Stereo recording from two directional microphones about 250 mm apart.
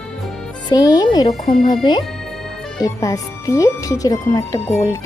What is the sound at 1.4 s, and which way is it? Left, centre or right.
Speech, left.